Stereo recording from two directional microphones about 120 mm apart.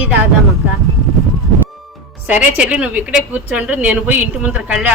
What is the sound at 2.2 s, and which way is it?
A woman's voice, 10° right (ahead or behind).